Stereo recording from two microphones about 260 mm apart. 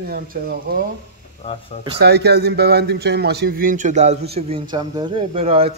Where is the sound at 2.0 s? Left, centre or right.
Right.